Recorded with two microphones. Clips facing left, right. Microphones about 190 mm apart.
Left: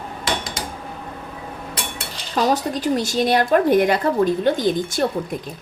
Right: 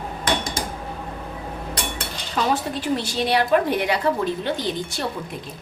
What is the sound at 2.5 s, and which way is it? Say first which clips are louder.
A woman's voice: left 3 dB; 40° left (ahead or behind).